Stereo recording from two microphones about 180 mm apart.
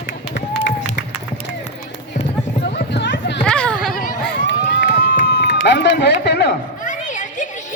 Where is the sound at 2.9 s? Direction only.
80° left.